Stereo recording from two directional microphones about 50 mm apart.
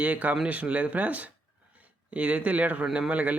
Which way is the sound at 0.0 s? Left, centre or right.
Right.